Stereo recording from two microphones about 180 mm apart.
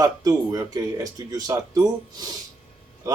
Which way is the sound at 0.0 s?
20° right (ahead or behind).